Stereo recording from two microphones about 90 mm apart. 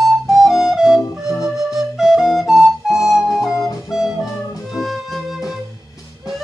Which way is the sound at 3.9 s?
5° right (ahead or behind).